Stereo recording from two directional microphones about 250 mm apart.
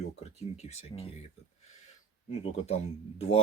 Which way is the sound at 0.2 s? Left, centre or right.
Left.